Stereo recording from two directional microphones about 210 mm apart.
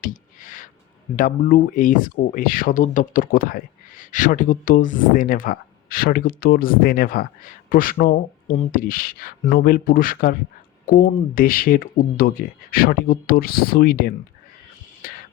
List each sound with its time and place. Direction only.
0.0 s a sound: 40° left (ahead or behind)
1.1 s speech: 40° left (ahead or behind)
15.0 s music: 40° left (ahead or behind)